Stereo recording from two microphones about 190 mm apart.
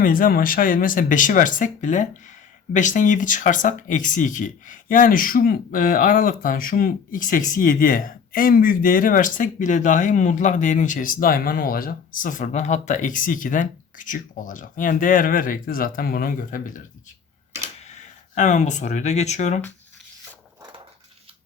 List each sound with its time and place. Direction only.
0.0 s speech: 45° left (ahead or behind)
17.8 s speech: 40° left (ahead or behind)
20.6 s dog: 25° right (ahead or behind)